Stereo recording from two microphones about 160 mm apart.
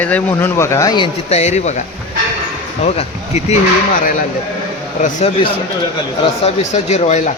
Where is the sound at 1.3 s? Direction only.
45° left (ahead or behind).